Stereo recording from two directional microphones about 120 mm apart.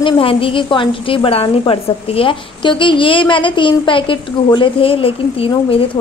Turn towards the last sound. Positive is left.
turn(degrees=50)  # may be behind; listen again after turning